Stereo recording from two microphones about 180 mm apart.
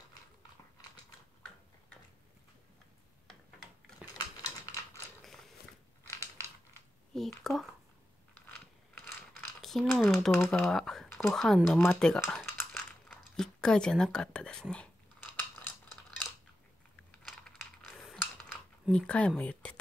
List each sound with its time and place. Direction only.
4.4 s typing: 15° left (ahead or behind)
5.2 s mechanisms: centre (ahead or behind)
7.2 s speech: centre (ahead or behind)
9.0 s crumpling: 5° left (ahead or behind)
10.1 s speech: centre (ahead or behind)
11.8 s coin: 5° left (ahead or behind)
17.2 s typing: 5° left (ahead or behind)